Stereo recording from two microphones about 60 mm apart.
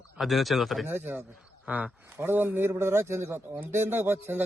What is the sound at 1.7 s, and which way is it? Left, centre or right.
Speech, right.